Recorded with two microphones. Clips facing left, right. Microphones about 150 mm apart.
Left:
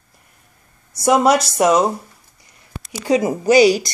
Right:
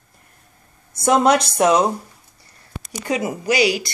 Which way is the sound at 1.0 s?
5° left (ahead or behind).